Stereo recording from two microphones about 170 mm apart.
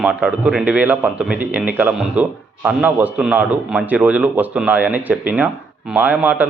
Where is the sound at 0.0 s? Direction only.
5° right (ahead or behind).